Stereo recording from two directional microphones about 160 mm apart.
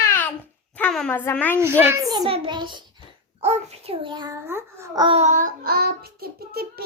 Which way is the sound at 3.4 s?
40° right (ahead or behind).